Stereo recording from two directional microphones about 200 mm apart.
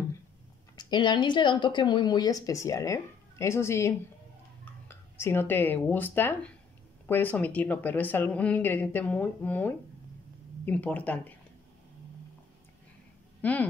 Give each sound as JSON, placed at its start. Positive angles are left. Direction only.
{"t": 0.7, "sound": "speech", "side_deg": 20}
{"t": 13.4, "sound": "speech", "side_deg": 10}